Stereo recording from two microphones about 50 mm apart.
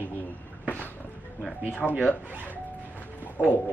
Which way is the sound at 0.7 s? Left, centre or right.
Left.